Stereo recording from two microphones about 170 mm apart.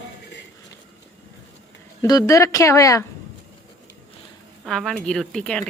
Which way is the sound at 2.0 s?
20° left (ahead or behind).